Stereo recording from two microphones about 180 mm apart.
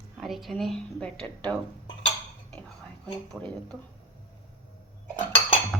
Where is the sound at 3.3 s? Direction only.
5° left (ahead or behind).